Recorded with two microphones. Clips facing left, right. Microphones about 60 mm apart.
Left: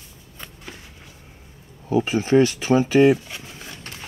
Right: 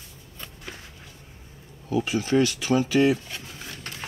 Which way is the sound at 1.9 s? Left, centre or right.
Left.